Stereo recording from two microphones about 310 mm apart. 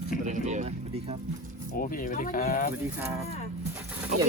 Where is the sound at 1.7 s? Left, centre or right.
Left.